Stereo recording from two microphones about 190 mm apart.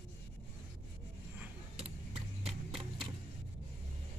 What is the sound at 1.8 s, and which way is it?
Vehicle, 30° right (ahead or behind).